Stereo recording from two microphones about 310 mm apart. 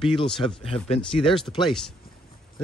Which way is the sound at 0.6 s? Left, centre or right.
Centre.